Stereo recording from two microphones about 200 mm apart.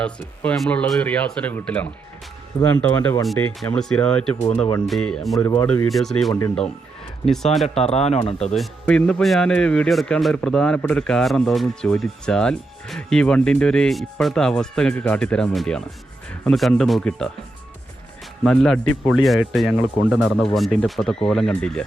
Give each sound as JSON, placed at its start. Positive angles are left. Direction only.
{"t": 0.0, "sound": "speech", "side_deg": 5}
{"t": 3.2, "sound": "speech", "side_deg": 0}
{"t": 5.4, "sound": "speech", "side_deg": 10}
{"t": 7.8, "sound": "speech", "side_deg": 30}
{"t": 8.5, "sound": "speech", "side_deg": 5}
{"t": 18.4, "sound": "speech", "side_deg": 5}